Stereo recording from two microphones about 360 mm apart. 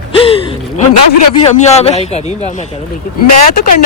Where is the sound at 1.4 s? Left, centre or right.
Centre.